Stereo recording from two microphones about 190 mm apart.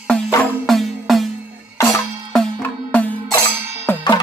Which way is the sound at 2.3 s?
5° left (ahead or behind).